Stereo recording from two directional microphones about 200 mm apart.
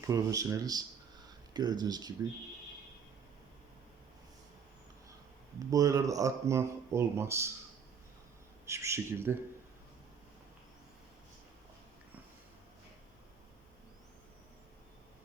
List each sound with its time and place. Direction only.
0.1 s speech: 15° right (ahead or behind)
5.7 s speech: 15° right (ahead or behind)
8.6 s speech: 15° right (ahead or behind)